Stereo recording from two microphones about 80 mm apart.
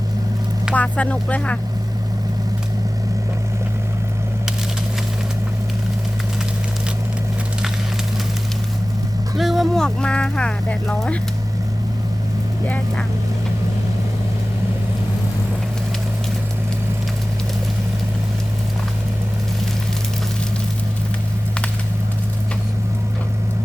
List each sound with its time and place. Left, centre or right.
0.7 s speech: centre
9.4 s vehicle: centre
9.8 s speech: centre